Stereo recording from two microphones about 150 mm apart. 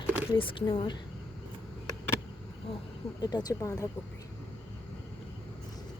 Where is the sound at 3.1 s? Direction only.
25° left (ahead or behind).